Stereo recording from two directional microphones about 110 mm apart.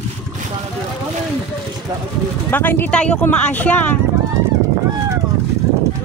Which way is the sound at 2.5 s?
15° left (ahead or behind).